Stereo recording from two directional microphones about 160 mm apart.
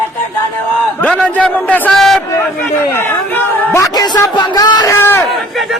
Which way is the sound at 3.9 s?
25° left (ahead or behind).